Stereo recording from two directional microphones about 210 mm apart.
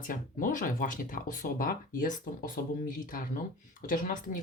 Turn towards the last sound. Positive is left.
turn(degrees=40)  # may be behind; listen again after turning